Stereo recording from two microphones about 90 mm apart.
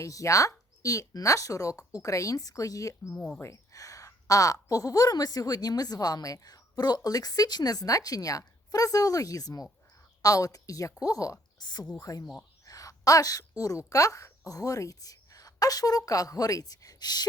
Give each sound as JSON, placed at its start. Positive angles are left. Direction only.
{"t": 0.0, "sound": "speech", "side_deg": 35}
{"t": 3.1, "sound": "speech", "side_deg": 15}
{"t": 3.4, "sound": "a woman's voice", "side_deg": 35}